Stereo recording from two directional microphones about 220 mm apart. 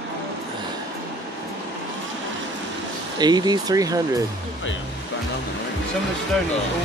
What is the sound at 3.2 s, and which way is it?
Speech, 20° right (ahead or behind).